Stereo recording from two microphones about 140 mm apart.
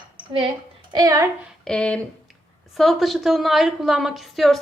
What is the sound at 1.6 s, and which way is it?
A woman's voice, 5° left (ahead or behind).